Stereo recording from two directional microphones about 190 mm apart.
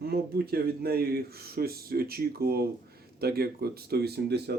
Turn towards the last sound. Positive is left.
turn(degrees=-60)  # may be behind; listen again after turning